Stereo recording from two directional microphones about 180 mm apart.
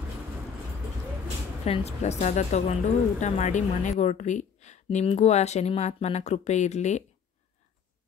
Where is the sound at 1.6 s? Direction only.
35° left (ahead or behind).